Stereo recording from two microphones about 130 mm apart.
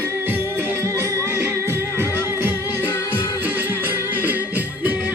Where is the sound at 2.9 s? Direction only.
20° left (ahead or behind).